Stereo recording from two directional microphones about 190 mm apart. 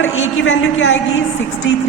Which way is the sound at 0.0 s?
90° left.